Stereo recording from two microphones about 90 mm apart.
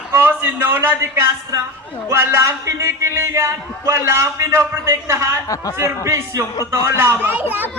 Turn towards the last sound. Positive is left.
turn(degrees=-20)  # may be behind; listen again after turning